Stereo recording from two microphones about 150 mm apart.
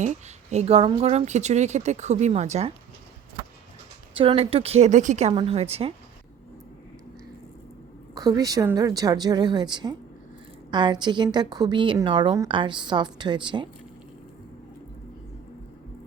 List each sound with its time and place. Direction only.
0.0 s a woman's voice: 50° right (ahead or behind)
4.1 s a woman's voice: 35° right (ahead or behind); by 5.3 s 50° right (ahead or behind)
5.3 s a woman's voice: 30° right (ahead or behind)
5.5 s a woman's voice: 45° right (ahead or behind)
8.1 s a woman's voice: 25° right (ahead or behind)